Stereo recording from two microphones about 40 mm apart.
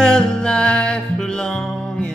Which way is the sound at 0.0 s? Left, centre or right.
Centre.